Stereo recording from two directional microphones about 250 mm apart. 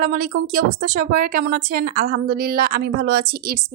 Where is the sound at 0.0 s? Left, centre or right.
Right.